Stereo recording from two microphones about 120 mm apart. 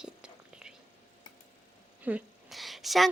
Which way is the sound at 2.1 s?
15° right (ahead or behind).